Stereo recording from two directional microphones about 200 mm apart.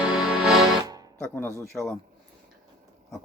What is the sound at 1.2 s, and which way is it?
Music, 10° left (ahead or behind).